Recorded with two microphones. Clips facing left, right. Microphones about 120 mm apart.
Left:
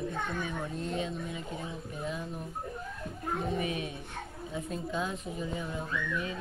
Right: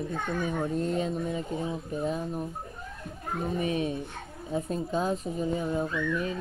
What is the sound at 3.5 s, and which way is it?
Speech, 35° right (ahead or behind).